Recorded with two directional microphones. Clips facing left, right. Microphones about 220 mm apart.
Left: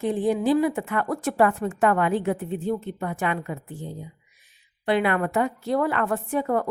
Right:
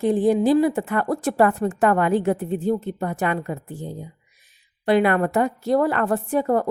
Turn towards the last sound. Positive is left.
turn(degrees=-40)  # may be behind; listen again after turning